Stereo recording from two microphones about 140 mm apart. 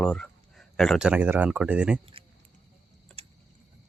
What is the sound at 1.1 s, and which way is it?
Speech, 10° right (ahead or behind).